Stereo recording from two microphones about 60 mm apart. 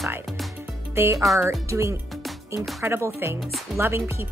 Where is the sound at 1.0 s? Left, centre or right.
Right.